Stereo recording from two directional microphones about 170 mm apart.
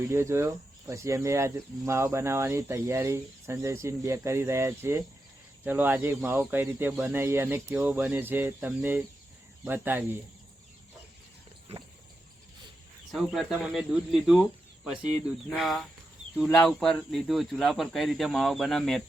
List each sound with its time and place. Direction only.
0.1 s speech: 15° right (ahead or behind)
13.1 s speech: centre (ahead or behind)
15.4 s speech: centre (ahead or behind)